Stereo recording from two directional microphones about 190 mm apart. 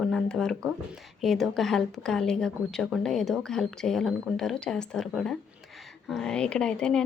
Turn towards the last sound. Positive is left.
turn(degrees=5)  # may be behind; listen again after turning